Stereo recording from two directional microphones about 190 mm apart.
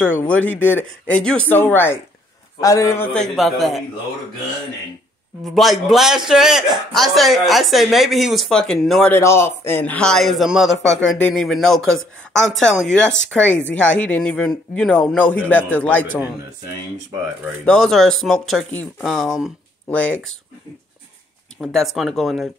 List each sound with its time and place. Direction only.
0.1 s speech: 10° left (ahead or behind)
3.3 s a man's voice: centre (ahead or behind)
5.4 s a man's voice: centre (ahead or behind)
9.1 s a man's voice: 15° left (ahead or behind)
17.6 s a man's voice: 5° left (ahead or behind)
21.5 s a man's voice: centre (ahead or behind)